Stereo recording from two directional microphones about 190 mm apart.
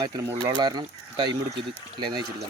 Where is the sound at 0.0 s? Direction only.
20° right (ahead or behind).